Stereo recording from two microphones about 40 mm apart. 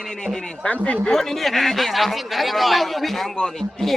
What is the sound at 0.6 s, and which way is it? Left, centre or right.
Speech, left.